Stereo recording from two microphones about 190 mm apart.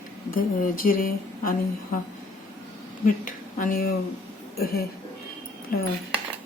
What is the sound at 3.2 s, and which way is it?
Speech, 45° left (ahead or behind).